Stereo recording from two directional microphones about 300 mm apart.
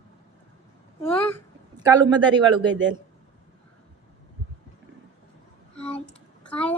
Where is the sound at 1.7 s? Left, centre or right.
Centre.